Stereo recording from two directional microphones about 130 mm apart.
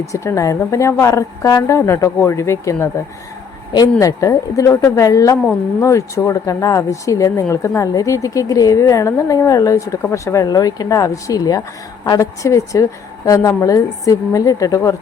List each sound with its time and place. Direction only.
0.1 s a woman's voice: 25° left (ahead or behind)
4.0 s a woman's voice: 25° left (ahead or behind)